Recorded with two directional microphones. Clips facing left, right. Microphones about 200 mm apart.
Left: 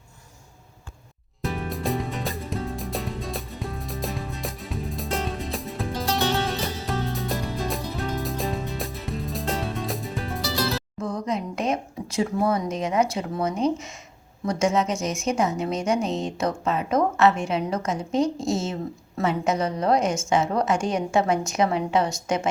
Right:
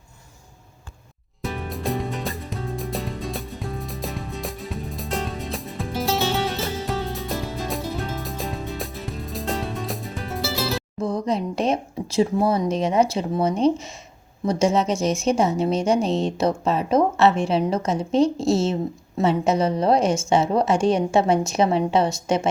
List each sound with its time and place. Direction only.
1.4 s music: centre (ahead or behind)
11.0 s a woman's voice: 30° right (ahead or behind)